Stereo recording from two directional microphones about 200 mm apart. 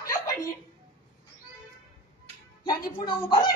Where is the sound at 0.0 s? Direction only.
15° left (ahead or behind).